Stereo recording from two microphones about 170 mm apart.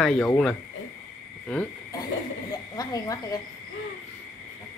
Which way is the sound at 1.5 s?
5° left (ahead or behind).